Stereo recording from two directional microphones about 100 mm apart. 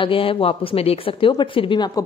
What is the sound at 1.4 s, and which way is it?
Speech, 60° left (ahead or behind).